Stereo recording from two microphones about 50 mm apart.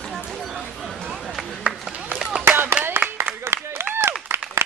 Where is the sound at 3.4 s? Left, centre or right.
Right.